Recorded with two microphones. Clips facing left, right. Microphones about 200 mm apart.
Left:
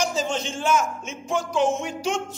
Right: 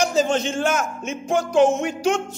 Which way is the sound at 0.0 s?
65° right (ahead or behind).